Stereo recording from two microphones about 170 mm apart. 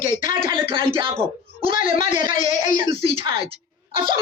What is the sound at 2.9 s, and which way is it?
Speech, 35° right (ahead or behind).